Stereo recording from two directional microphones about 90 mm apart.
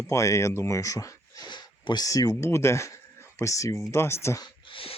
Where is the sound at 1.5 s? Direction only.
55° left (ahead or behind).